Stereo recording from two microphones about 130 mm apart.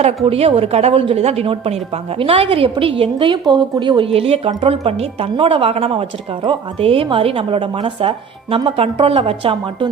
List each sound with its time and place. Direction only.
0.3 s a woman's voice: 50° right (ahead or behind)